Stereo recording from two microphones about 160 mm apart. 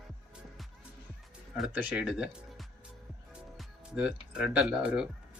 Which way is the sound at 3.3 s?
5° right (ahead or behind).